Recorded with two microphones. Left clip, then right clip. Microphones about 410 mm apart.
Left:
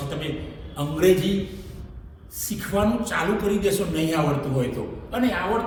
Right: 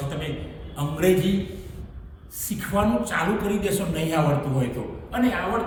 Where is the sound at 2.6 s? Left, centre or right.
Centre.